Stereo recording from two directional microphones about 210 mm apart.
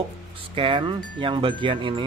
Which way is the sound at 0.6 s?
25° right (ahead or behind).